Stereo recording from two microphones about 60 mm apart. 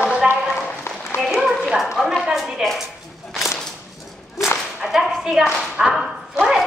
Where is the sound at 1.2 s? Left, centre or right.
Centre.